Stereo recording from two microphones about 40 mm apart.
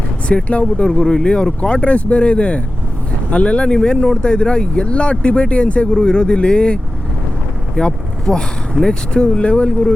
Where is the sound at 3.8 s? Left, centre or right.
Centre; by 5.9 s left.